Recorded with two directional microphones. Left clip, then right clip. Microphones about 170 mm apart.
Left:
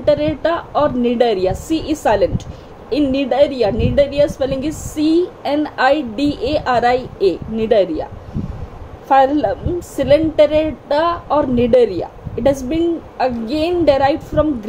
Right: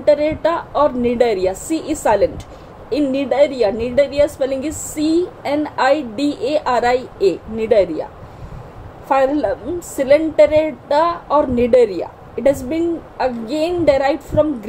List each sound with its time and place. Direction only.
0.0 s a woman's voice: 5° left (ahead or behind)
9.1 s a woman's voice: 5° left (ahead or behind)